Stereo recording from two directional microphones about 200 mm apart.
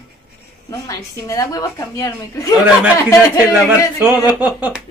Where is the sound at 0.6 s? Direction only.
15° left (ahead or behind).